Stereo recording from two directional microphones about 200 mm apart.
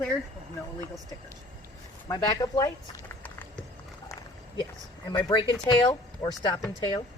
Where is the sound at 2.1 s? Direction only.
20° left (ahead or behind).